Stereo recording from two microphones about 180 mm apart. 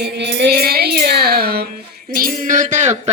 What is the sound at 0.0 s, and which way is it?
Music, 75° right (ahead or behind).